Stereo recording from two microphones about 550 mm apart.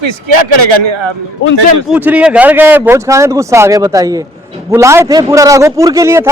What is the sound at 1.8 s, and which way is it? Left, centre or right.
Speech, centre.